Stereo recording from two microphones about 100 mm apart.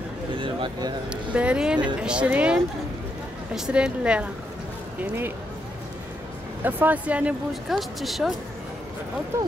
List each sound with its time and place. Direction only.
0.4 s a sound: 50° right (ahead or behind)
1.1 s a woman's voice: 10° right (ahead or behind)
6.6 s a woman's voice: 15° right (ahead or behind)
7.6 s speech: centre (ahead or behind)